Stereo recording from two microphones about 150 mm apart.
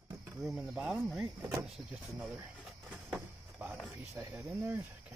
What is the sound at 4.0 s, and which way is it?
Speech, 20° right (ahead or behind).